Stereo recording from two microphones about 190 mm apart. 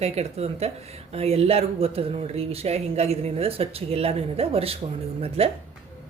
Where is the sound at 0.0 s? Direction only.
35° right (ahead or behind).